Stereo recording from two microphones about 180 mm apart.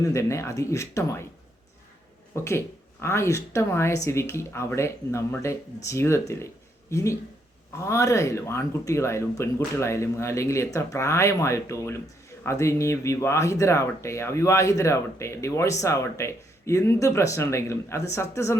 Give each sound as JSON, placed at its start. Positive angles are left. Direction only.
{"t": 0.0, "sound": "speech", "side_deg": 15}
{"t": 2.3, "sound": "speech", "side_deg": 15}